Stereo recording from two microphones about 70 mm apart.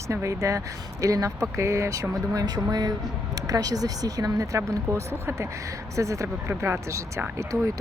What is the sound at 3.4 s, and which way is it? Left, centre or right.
Speech, right.